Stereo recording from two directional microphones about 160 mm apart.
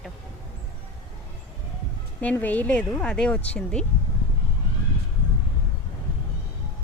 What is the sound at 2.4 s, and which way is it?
A woman's voice, 10° left (ahead or behind).